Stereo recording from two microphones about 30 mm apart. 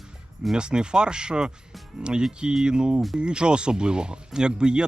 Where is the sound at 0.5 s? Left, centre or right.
Right.